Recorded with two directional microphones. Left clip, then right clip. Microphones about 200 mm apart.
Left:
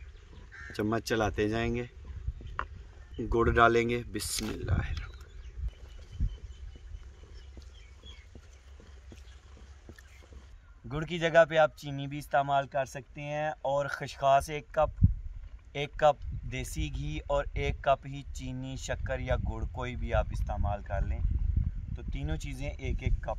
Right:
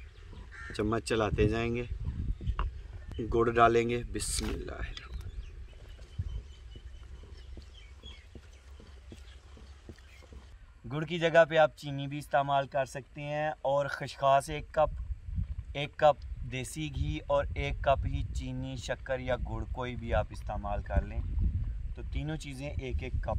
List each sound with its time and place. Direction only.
0.7 s speech: 25° left (ahead or behind)
3.2 s speech: 20° left (ahead or behind)
10.9 s speech: centre (ahead or behind)